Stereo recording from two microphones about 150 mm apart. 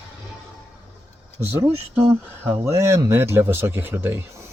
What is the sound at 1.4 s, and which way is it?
Speech, 15° right (ahead or behind).